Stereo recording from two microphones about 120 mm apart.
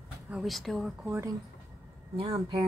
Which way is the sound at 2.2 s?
50° right (ahead or behind).